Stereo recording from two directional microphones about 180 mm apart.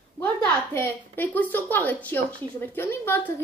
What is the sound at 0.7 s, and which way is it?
A child's voice, 10° left (ahead or behind).